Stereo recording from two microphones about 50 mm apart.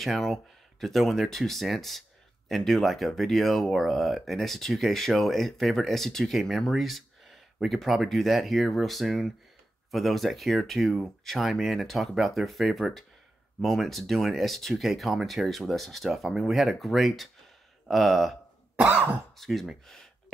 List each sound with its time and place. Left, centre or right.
0.0 s speech: centre
18.8 s cough: right
19.3 s speech: centre